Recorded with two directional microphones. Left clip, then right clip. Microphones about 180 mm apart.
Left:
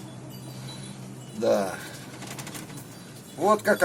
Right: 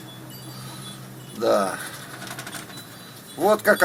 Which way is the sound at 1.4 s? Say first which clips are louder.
Right 3 dB; 20° right (ahead or behind).